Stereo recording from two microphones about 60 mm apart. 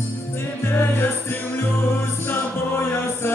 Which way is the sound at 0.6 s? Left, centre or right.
Left.